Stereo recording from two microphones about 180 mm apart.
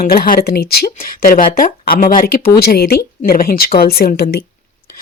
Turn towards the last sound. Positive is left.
turn(degrees=60)  # may be behind; listen again after turning